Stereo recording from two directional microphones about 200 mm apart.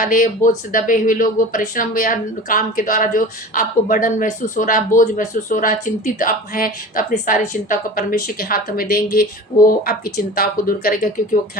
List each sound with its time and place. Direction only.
0.0 s speech: 45° left (ahead or behind)